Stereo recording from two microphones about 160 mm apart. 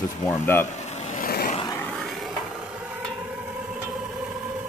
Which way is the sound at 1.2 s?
65° left (ahead or behind).